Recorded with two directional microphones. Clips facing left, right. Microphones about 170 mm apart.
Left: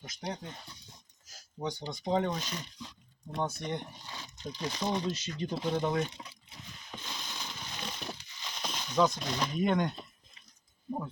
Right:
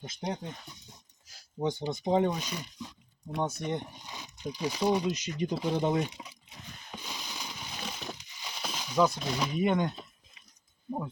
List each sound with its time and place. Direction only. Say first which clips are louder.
0.0 s speech: right 4 dB; 25° right (ahead or behind)
1.8 s speech: right 3 dB; 20° right (ahead or behind)
6.9 s a sound: right 1 dB; 10° right (ahead or behind)